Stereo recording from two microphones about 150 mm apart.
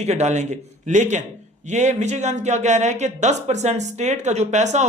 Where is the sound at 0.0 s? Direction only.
45° right (ahead or behind).